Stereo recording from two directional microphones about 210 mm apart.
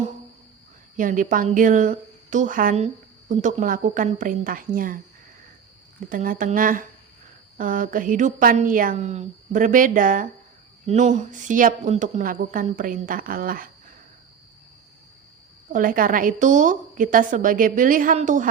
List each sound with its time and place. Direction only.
0.9 s a woman's voice: 40° right (ahead or behind)
6.1 s a woman's voice: 40° right (ahead or behind)
15.7 s a woman's voice: 40° right (ahead or behind)